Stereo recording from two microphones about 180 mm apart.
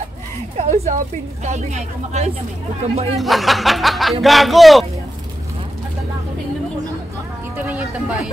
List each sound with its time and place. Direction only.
0.6 s a woman's voice: 40° right (ahead or behind)
3.2 s speech: centre (ahead or behind)
7.6 s a sound: 10° right (ahead or behind)